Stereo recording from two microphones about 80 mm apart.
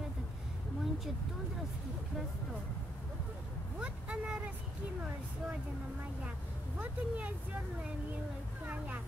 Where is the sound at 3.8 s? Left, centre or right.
Centre.